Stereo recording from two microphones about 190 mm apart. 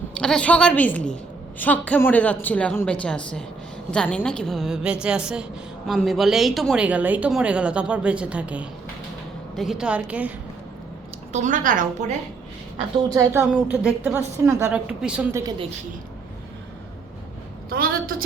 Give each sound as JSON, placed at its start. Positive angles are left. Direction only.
{"t": 0.2, "sound": "a woman's voice", "side_deg": 5}
{"t": 11.3, "sound": "a woman's voice", "side_deg": -40}
{"t": 13.5, "sound": "a woman's voice", "side_deg": -5}
{"t": 17.7, "sound": "a sound", "side_deg": -50}